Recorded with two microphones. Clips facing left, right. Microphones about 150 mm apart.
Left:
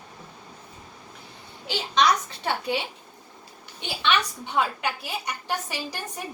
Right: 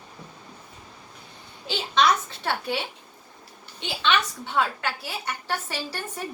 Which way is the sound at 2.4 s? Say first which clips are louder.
Left 1 dB; 15° left (ahead or behind).